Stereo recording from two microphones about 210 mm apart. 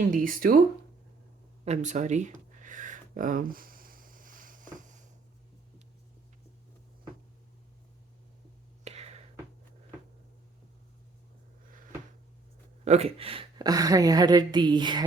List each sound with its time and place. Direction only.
0.0 s speech: 40° right (ahead or behind)
1.6 s a sound: 35° right (ahead or behind)
8.8 s whispering: 30° right (ahead or behind)
12.8 s a woman's voice: 30° right (ahead or behind)